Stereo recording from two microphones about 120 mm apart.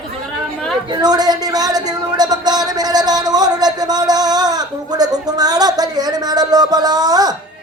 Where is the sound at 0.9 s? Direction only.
35° right (ahead or behind).